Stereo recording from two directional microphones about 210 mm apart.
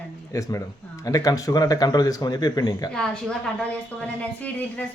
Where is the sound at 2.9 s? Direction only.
5° left (ahead or behind).